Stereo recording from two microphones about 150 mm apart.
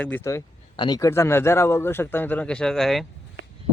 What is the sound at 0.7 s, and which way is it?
Speech, 30° left (ahead or behind).